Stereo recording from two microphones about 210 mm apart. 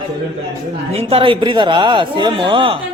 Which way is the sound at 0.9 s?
30° right (ahead or behind).